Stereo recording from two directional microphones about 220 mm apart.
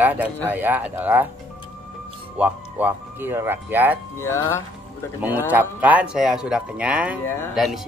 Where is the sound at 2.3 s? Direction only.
5° right (ahead or behind).